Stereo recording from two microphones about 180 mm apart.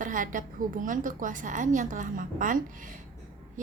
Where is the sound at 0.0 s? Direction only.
45° right (ahead or behind).